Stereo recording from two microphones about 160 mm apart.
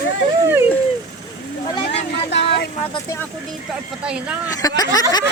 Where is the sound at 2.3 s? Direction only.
90° left.